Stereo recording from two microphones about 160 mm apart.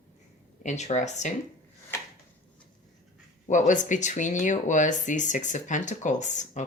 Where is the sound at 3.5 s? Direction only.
50° left (ahead or behind).